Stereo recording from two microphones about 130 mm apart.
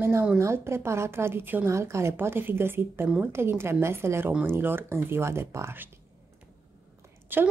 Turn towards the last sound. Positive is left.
turn(degrees=-15)  # may be behind; listen again after turning